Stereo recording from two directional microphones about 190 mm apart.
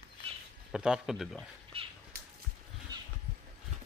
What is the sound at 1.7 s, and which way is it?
Cat, 30° right (ahead or behind).